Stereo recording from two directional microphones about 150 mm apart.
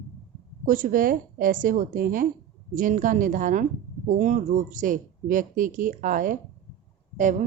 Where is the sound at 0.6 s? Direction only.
65° right (ahead or behind).